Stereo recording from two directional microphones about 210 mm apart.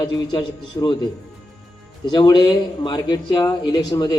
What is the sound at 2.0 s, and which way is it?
A man's voice, 20° left (ahead or behind).